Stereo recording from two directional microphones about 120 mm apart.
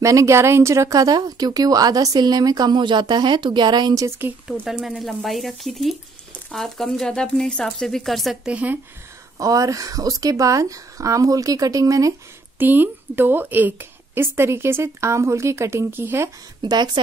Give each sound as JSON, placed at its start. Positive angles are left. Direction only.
{"t": 0.0, "sound": "speech", "side_deg": -25}
{"t": 4.6, "sound": "speech", "side_deg": -5}
{"t": 9.4, "sound": "speech", "side_deg": -30}
{"t": 12.5, "sound": "speech", "side_deg": -15}
{"t": 16.6, "sound": "speech", "side_deg": -35}